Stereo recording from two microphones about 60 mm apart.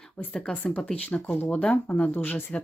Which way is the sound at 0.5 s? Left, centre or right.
Left.